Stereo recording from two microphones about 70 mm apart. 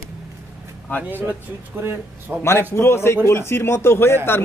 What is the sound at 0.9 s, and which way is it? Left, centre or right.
Speech, left.